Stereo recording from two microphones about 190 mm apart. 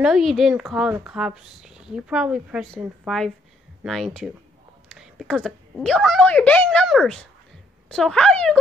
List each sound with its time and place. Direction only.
0.0 s speech: centre (ahead or behind)